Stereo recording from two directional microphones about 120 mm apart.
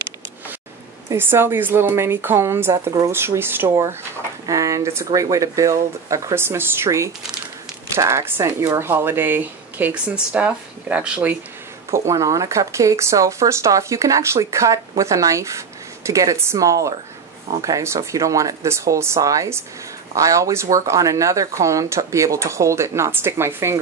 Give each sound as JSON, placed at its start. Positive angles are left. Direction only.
{"t": 1.1, "sound": "speech", "side_deg": -20}
{"t": 11.9, "sound": "speech", "side_deg": -25}